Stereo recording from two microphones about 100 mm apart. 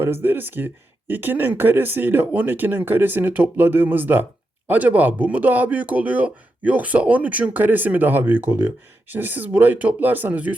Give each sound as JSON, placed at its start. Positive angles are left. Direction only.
{"t": 0.0, "sound": "speech", "side_deg": -20}